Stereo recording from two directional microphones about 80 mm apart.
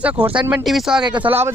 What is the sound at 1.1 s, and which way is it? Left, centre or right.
Speech, right.